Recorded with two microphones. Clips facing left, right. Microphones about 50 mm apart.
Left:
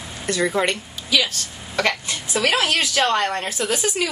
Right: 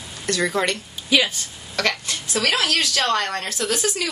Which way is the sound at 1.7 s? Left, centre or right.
Centre.